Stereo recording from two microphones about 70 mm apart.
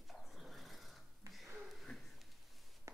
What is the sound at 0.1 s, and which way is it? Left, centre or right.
Dog, centre.